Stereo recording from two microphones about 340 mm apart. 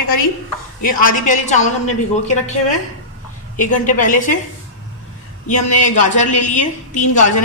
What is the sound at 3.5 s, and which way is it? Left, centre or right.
Speech, left.